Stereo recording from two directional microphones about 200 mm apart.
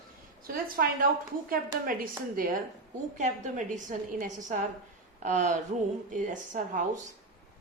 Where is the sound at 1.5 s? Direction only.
45° right (ahead or behind).